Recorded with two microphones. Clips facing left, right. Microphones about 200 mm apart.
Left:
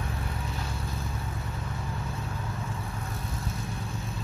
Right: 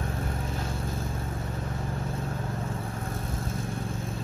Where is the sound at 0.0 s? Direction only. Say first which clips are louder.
Right 3 dB; 45° right (ahead or behind).